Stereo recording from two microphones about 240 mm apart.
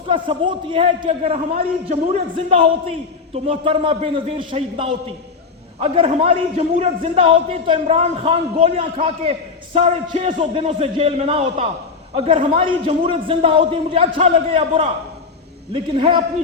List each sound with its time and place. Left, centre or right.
0.1 s a man's voice: right